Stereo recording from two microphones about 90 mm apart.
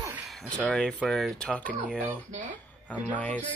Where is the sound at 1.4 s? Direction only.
15° left (ahead or behind).